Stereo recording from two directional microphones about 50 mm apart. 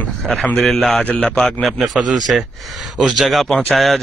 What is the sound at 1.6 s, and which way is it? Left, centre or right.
Speech, centre.